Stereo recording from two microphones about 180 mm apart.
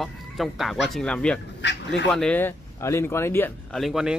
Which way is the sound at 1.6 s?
80° left.